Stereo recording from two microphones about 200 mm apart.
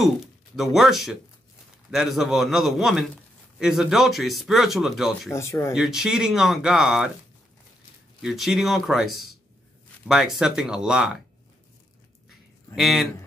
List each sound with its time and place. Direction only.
0.6 s speech: centre (ahead or behind)
5.3 s speech: 15° left (ahead or behind)
5.8 s speech: centre (ahead or behind)
8.2 s speech: centre (ahead or behind)
12.7 s speech: centre (ahead or behind)